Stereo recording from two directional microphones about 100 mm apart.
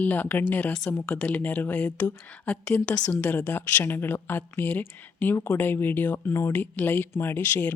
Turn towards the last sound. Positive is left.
turn(degrees=20)  # may be behind; listen again after turning